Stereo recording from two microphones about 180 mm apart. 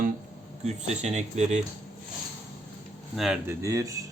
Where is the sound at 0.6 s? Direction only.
40° right (ahead or behind).